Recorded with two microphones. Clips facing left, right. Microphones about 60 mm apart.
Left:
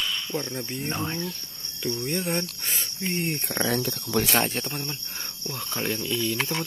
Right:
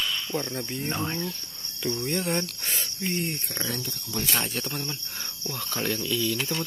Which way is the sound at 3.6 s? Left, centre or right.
Left.